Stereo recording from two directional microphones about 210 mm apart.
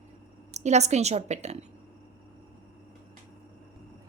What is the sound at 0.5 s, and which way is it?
A woman's voice, 30° right (ahead or behind).